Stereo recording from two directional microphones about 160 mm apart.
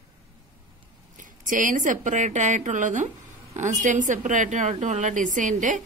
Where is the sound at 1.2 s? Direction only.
55° right (ahead or behind).